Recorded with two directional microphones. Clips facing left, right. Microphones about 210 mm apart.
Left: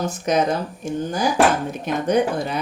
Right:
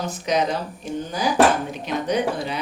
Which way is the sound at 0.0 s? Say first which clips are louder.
Left 2 dB; 50° left (ahead or behind).